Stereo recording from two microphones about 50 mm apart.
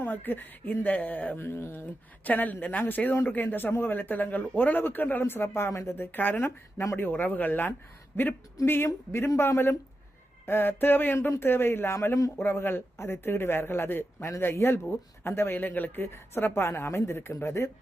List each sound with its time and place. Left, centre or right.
0.0 s a man's voice: left
1.4 s a man's voice: left
2.2 s a man's voice: left
5.7 s speech: left
6.0 s a man's voice: left
10.4 s a man's voice: left
16.1 s a man's voice: left